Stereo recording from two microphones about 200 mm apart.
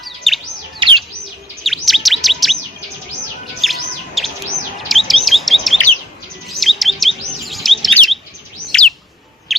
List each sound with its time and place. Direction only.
0.3 s chirp: centre (ahead or behind)
0.8 s bird: 25° right (ahead or behind)
1.6 s chirp: centre (ahead or behind)
3.6 s chirp: centre (ahead or behind)
8.6 s bird: 5° left (ahead or behind)